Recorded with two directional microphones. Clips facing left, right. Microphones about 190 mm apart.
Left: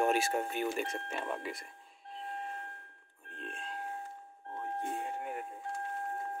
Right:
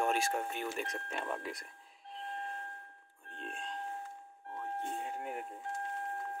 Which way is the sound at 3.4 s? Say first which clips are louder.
Even; centre (ahead or behind).